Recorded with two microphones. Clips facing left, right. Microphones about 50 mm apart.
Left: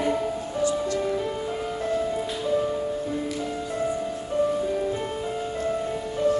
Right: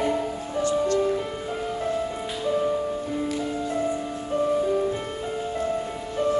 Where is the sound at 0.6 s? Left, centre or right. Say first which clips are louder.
Right 3 dB; right.